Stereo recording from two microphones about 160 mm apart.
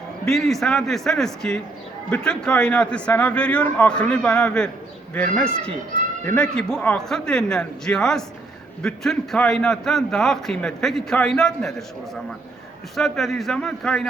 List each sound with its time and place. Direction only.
0.3 s a man's voice: centre (ahead or behind)
13.0 s a man's voice: centre (ahead or behind)